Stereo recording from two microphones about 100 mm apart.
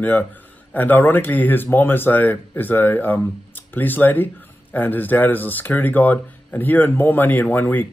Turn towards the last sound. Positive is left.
turn(degrees=20)  # may be behind; listen again after turning